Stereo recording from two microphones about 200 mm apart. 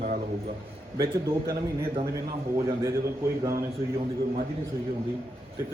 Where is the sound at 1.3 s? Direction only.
15° right (ahead or behind).